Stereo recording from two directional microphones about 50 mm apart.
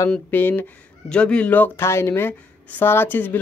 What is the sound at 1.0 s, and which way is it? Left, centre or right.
Speech, centre.